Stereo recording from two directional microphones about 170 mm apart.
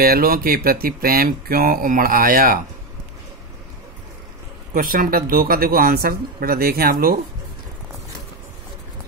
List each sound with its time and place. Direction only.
0.0 s speech: 60° right (ahead or behind)
4.7 s speech: 55° right (ahead or behind)